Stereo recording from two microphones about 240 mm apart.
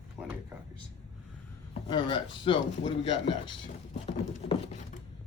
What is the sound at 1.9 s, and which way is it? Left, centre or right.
Speech, centre.